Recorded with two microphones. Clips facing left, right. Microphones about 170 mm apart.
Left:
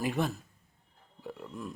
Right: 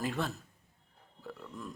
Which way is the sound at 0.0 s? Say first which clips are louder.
Left 4 dB; 15° left (ahead or behind).